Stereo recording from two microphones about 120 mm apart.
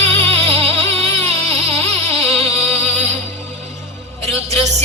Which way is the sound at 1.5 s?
65° right (ahead or behind).